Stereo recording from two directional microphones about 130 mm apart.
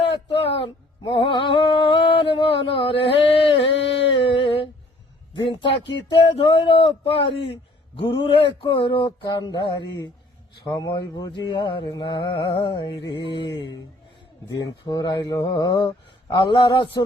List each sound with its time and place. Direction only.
0.3 s music: 45° left (ahead or behind)
4.1 s a sound: 45° left (ahead or behind)
5.3 s speech: 35° left (ahead or behind)
8.6 s mantra: 40° left (ahead or behind)